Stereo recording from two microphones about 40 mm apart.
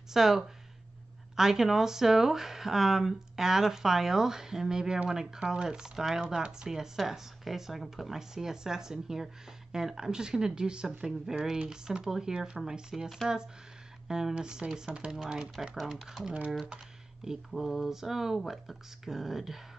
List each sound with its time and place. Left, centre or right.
0.1 s speech: centre
6.2 s speech: right
11.1 s speech: centre
11.5 s speech: right
17.5 s speech: centre